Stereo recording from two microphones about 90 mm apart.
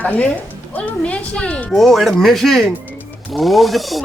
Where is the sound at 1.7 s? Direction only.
Centre (ahead or behind).